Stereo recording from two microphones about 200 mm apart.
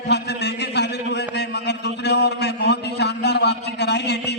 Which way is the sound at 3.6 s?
55° left (ahead or behind).